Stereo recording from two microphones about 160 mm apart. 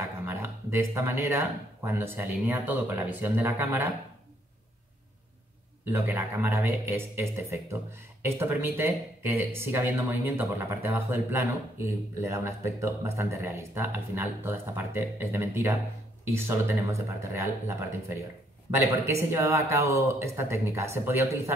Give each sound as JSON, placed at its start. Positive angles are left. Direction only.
{"t": 0.3, "sound": "a man's voice", "side_deg": -15}
{"t": 5.9, "sound": "a man's voice", "side_deg": -10}